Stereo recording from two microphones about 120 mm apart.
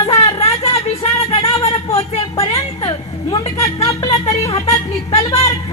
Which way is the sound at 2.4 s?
40° left (ahead or behind).